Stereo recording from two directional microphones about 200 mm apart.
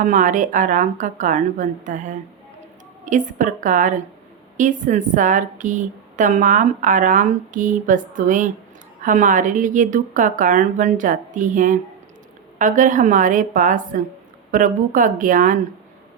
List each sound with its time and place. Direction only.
0.0 s a woman's voice: 40° right (ahead or behind)